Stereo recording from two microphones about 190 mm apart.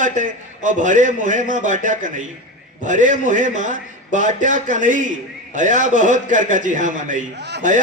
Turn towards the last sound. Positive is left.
turn(degrees=-65)  # may be behind; listen again after turning